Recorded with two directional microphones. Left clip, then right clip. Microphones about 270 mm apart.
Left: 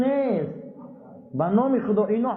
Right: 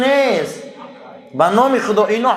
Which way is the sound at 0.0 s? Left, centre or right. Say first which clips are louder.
Right 9 dB; centre.